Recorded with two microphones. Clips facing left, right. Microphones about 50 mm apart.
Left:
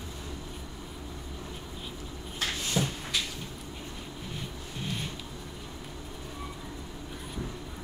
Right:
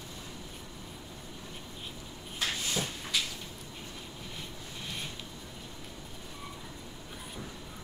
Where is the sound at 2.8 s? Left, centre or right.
Left.